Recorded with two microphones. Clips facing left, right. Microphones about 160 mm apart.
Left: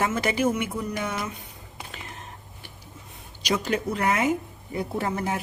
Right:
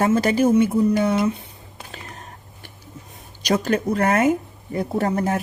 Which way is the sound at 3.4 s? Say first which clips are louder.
Right 5 dB; 45° right (ahead or behind).